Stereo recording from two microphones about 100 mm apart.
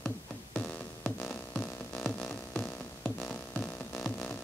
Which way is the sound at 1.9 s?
Centre (ahead or behind).